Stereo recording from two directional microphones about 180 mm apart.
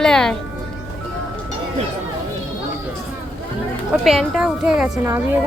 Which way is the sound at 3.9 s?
Centre (ahead or behind).